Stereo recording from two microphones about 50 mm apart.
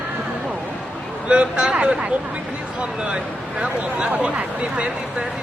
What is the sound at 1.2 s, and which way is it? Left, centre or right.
Speech, right.